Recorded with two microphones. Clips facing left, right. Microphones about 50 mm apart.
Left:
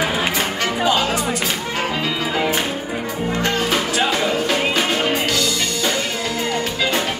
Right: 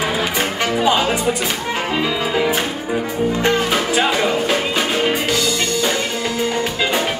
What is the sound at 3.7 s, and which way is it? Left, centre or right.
Music, centre.